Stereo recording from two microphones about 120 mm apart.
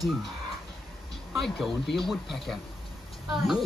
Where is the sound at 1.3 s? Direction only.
Centre (ahead or behind).